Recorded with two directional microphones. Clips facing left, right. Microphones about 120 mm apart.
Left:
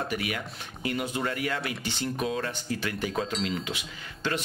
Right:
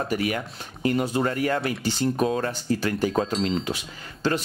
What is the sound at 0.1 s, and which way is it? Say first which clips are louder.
Speech: right 6 dB; 40° right (ahead or behind).